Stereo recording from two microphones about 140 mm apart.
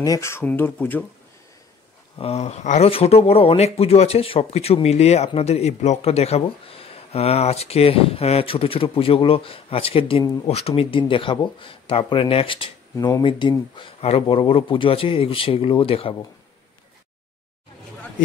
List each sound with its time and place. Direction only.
0.0 s speech: 25° left (ahead or behind)
2.1 s speech: 45° left (ahead or behind)
2.9 s speech: 45° left (ahead or behind)